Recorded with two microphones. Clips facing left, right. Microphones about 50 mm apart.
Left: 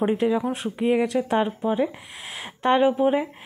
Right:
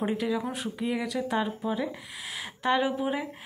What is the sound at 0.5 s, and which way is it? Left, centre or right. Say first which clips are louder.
Speech: left 8 dB; left.